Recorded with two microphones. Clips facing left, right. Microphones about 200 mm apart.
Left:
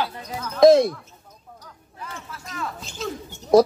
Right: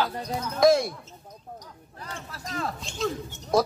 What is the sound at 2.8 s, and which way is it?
Music, centre (ahead or behind).